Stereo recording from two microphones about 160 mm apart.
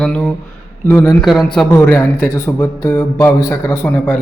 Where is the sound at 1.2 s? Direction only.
Centre (ahead or behind).